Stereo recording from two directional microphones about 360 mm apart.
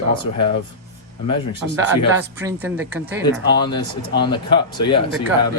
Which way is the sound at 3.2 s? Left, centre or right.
Centre.